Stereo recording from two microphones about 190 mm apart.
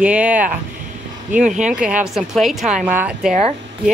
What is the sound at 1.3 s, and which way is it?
Speech, 40° right (ahead or behind).